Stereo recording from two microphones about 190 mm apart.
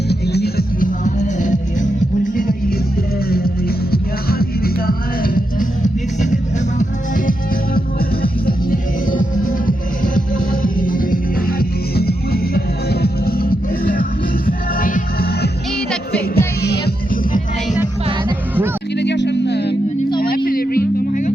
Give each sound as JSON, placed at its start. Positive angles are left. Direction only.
{"t": 0.1, "sound": "music", "side_deg": 60}
{"t": 1.0, "sound": "music", "side_deg": 40}
{"t": 7.3, "sound": "music", "side_deg": 50}
{"t": 16.6, "sound": "music", "side_deg": 60}
{"t": 18.9, "sound": "music", "side_deg": 65}
{"t": 20.1, "sound": "music", "side_deg": 50}